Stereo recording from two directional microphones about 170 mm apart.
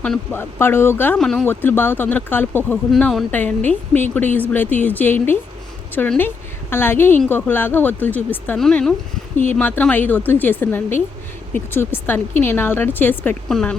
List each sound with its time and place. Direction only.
0.0 s speech: 10° left (ahead or behind)
2.9 s a woman's voice: centre (ahead or behind)